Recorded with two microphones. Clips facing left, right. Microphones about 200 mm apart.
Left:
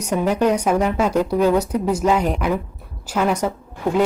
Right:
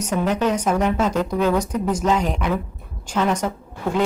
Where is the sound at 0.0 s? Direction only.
10° left (ahead or behind).